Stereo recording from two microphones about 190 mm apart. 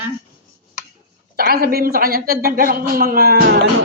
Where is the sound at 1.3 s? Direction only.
50° right (ahead or behind).